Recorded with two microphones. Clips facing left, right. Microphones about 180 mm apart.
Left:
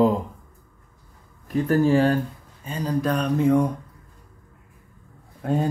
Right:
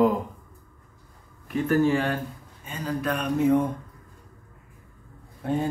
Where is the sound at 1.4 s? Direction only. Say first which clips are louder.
Left 2 dB; 35° left (ahead or behind).